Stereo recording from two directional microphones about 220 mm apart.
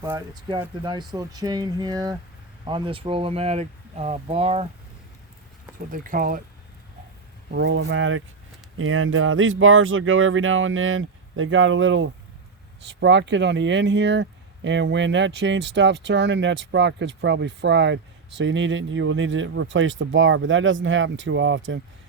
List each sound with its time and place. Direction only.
0.0 s speech: 15° right (ahead or behind)
5.9 s speech: 40° right (ahead or behind)
7.5 s speech: 55° right (ahead or behind)